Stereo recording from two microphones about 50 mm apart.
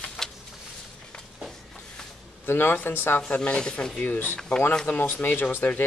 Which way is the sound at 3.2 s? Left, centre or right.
Left.